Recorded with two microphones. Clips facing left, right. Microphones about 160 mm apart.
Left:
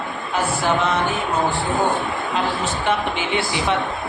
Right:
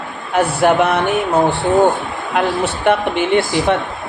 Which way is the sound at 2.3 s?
60° right (ahead or behind).